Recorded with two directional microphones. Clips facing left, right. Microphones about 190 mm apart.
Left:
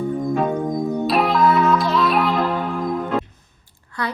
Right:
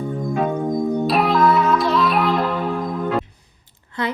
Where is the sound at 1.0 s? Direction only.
Centre (ahead or behind).